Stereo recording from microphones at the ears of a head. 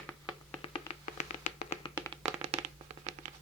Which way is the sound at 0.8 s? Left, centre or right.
Left.